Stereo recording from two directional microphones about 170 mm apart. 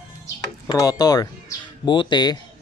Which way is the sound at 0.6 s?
20° left (ahead or behind).